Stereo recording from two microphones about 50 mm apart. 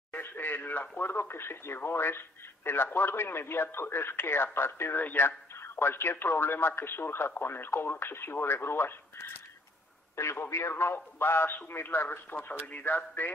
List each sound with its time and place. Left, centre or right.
0.1 s speech: left
4.9 s speech: left
5.6 s speech: left
10.2 s speech: left
10.7 s speech: left
12.4 s speech: left